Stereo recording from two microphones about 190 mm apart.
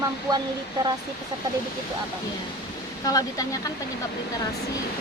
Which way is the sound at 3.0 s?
20° left (ahead or behind).